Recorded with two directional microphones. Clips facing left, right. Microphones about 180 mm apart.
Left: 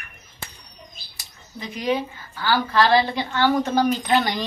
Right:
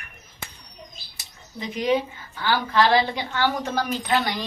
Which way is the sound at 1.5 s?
20° right (ahead or behind).